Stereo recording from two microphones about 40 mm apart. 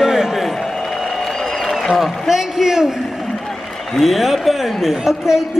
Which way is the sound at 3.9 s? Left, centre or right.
Centre.